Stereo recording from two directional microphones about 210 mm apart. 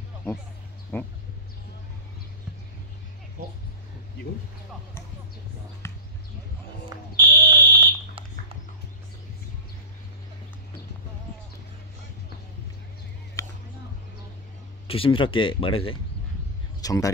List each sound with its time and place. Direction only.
0.9 s speech: 10° left (ahead or behind)
5.8 s basketball bounce: 10° left (ahead or behind)
7.2 s fire alarm: 20° right (ahead or behind)
13.4 s music: 15° left (ahead or behind)
14.9 s speech: 25° left (ahead or behind)